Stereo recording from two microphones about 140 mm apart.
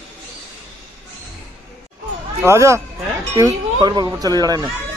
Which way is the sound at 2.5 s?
20° right (ahead or behind).